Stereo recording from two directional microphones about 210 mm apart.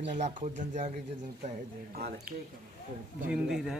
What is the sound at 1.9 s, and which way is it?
Speech, 45° right (ahead or behind).